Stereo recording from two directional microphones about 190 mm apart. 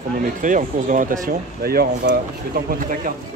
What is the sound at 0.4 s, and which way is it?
Speech, 45° right (ahead or behind).